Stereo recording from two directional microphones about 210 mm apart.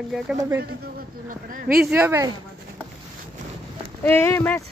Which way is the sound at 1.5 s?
40° right (ahead or behind).